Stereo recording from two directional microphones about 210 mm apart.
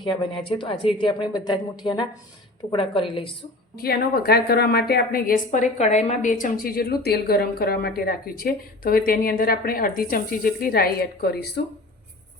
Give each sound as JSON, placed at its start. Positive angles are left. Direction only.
{"t": 0.0, "sound": "a woman's voice", "side_deg": 25}
{"t": 3.8, "sound": "a woman's voice", "side_deg": 45}